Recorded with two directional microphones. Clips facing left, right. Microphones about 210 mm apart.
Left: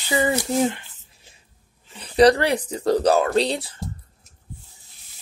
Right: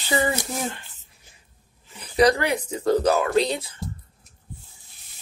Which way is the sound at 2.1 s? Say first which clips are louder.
Left 4 dB; 35° left (ahead or behind).